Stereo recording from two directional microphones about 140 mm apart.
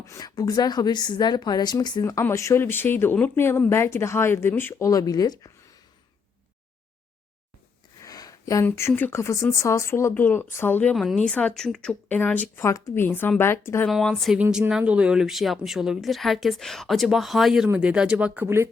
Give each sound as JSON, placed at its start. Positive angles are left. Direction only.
{"t": 0.0, "sound": "a woman's voice", "side_deg": 25}
{"t": 8.0, "sound": "a sound", "side_deg": 25}
{"t": 8.6, "sound": "a woman's voice", "side_deg": 20}
{"t": 14.3, "sound": "speech", "side_deg": -15}